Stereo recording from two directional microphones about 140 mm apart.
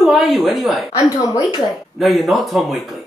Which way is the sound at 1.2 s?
25° left (ahead or behind).